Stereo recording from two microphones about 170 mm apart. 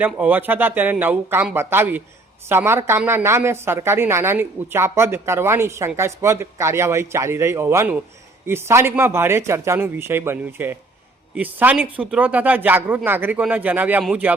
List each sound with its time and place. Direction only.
0.0 s a woman's voice: 10° right (ahead or behind)